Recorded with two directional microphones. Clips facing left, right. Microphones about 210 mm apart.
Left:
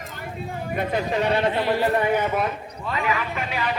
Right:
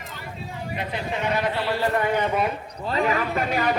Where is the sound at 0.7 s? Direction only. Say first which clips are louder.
Left 6 dB; 50° left (ahead or behind).